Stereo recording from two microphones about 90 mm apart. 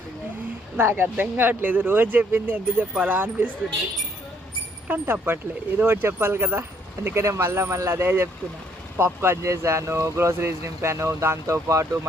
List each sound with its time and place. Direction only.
0.8 s speech: 25° right (ahead or behind)
4.9 s speech: 20° right (ahead or behind)